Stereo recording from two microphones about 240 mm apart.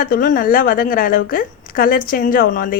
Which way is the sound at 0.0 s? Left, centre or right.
Left.